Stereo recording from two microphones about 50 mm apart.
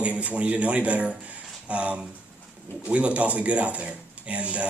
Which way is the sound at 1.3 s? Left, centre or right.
Right.